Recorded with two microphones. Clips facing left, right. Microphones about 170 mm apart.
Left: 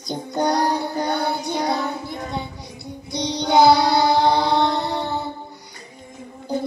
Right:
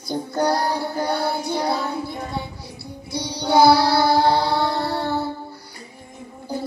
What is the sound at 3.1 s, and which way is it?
Child singing, 20° left (ahead or behind).